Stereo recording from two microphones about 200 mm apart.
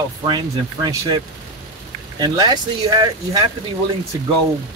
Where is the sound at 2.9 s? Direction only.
20° right (ahead or behind).